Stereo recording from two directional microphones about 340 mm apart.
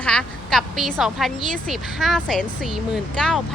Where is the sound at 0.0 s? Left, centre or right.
Centre.